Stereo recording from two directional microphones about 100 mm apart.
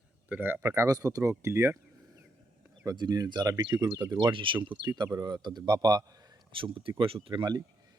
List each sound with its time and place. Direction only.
0.3 s speech: 20° right (ahead or behind)
2.8 s speech: 45° right (ahead or behind)
6.5 s speech: 60° right (ahead or behind)